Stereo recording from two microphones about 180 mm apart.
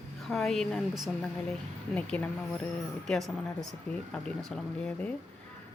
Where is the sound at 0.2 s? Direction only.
Centre (ahead or behind).